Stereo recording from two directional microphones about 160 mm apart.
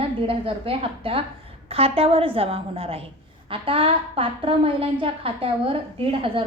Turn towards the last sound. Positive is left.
turn(degrees=-35)  # may be behind; listen again after turning